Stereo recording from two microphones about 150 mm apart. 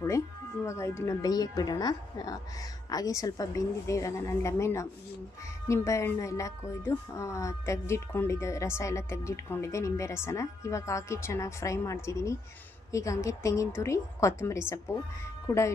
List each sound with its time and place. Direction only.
0.7 s speech: 20° left (ahead or behind)